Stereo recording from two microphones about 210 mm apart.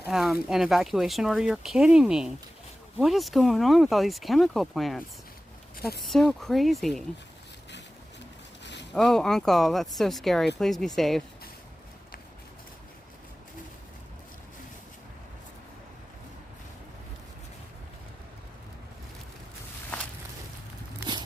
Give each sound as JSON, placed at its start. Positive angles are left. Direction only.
{"t": 0.0, "sound": "speech", "side_deg": 0}
{"t": 8.6, "sound": "a sound", "side_deg": 55}
{"t": 8.9, "sound": "speech", "side_deg": 0}